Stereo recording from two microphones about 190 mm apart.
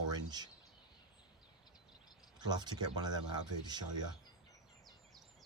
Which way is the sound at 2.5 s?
20° right (ahead or behind).